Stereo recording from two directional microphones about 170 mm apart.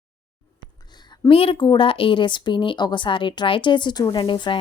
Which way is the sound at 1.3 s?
35° left (ahead or behind).